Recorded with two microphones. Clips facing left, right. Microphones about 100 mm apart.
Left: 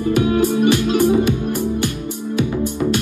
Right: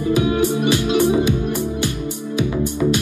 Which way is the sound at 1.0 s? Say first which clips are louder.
Left 1 dB; 45° left (ahead or behind).